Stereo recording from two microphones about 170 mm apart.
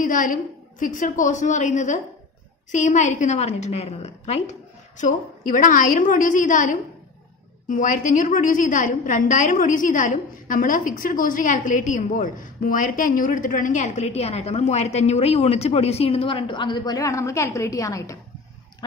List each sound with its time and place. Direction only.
0.0 s a woman's voice: 50° left (ahead or behind)
4.9 s a woman's voice: 50° left (ahead or behind); by 18.1 s 20° left (ahead or behind)